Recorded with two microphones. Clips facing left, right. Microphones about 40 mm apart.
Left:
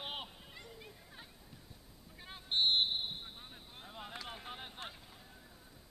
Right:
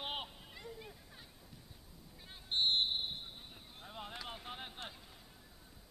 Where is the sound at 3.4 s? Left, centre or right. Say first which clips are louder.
Left 2 dB; centre.